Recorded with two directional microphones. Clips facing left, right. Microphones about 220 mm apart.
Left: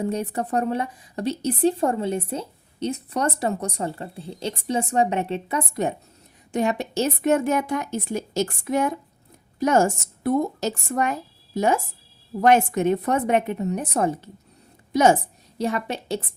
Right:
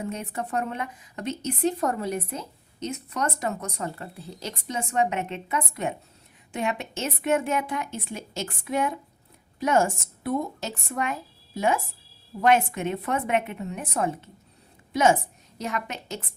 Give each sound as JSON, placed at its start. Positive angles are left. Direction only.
{"t": 0.0, "sound": "a woman's voice", "side_deg": 35}
{"t": 15.5, "sound": "a woman's voice", "side_deg": 30}